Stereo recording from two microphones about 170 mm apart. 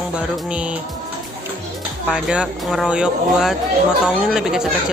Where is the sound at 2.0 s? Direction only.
5° right (ahead or behind).